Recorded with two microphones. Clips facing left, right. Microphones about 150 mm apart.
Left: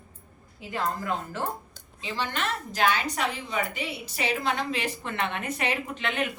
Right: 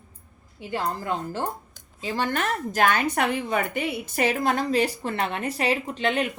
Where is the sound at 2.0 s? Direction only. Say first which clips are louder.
Right 5 dB; 45° right (ahead or behind).